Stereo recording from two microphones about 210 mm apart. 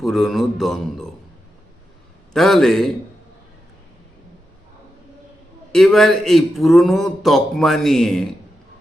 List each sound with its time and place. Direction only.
0.0 s speech: centre (ahead or behind)
2.3 s speech: centre (ahead or behind)
5.7 s speech: centre (ahead or behind)